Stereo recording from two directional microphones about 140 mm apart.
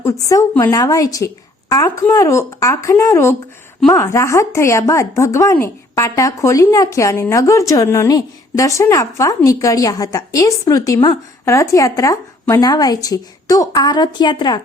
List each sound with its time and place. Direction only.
0.0 s a woman's voice: 20° left (ahead or behind)